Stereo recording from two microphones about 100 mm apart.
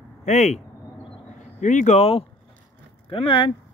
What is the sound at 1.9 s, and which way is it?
Speech, 90° left.